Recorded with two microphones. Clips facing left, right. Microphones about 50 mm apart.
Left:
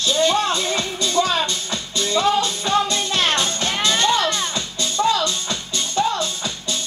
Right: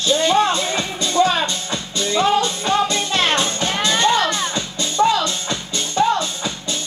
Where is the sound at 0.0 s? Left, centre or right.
Right.